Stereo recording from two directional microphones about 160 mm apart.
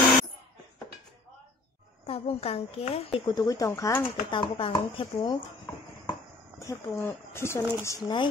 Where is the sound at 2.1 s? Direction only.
40° left (ahead or behind).